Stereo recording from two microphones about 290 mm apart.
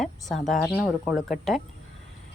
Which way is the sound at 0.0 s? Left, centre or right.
Centre.